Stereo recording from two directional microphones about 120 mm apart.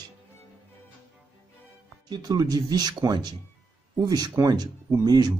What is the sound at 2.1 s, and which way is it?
Speech, 35° right (ahead or behind).